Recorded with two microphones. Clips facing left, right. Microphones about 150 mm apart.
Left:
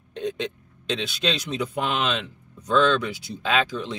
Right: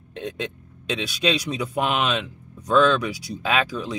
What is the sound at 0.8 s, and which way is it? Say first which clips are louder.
Speech: right 2 dB; 10° right (ahead or behind).